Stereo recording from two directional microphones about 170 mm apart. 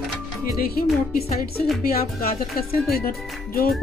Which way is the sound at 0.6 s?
60° left (ahead or behind).